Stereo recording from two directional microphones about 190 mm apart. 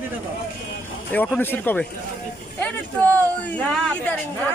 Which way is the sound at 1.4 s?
10° left (ahead or behind).